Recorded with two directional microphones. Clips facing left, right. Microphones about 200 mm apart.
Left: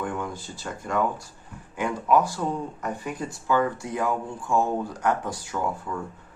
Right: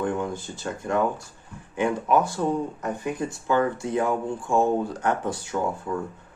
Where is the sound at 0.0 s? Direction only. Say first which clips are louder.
Right 4 dB; 25° right (ahead or behind).